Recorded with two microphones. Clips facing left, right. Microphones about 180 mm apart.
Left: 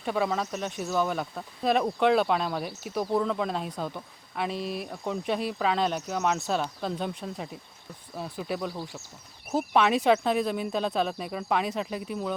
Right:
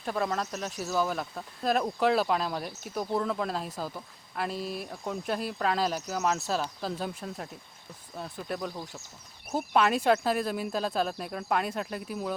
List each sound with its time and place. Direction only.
0.0 s speech: centre (ahead or behind)
9.7 s speech: centre (ahead or behind)